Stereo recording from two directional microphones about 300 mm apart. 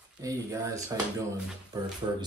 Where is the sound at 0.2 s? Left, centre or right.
Centre.